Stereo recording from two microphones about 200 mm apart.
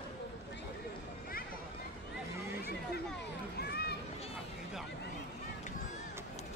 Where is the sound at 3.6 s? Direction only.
50° left (ahead or behind).